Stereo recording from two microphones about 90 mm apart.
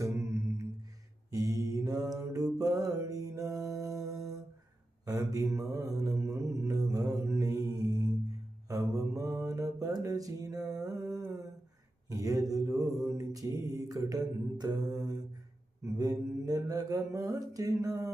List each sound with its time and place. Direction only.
0.0 s humming: 35° right (ahead or behind)
1.3 s mantra: 40° right (ahead or behind)
3.8 s music: 40° right (ahead or behind)
5.0 s mantra: 40° right (ahead or behind)
12.0 s a sound: 40° right (ahead or behind)
12.5 s mantra: 40° right (ahead or behind)